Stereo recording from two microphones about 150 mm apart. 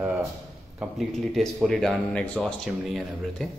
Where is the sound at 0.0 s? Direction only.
15° right (ahead or behind).